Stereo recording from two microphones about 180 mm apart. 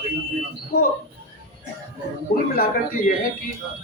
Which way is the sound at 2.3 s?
55° left (ahead or behind).